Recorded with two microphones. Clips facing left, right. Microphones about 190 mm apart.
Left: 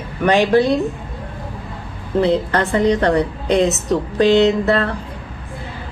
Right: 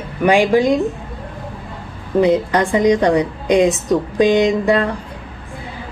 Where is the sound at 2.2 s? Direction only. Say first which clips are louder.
Right 2 dB; 15° right (ahead or behind).